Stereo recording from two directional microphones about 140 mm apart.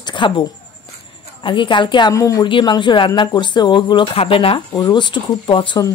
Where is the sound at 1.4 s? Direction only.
35° left (ahead or behind).